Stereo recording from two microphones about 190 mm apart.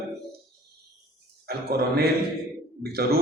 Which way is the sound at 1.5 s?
55° right (ahead or behind).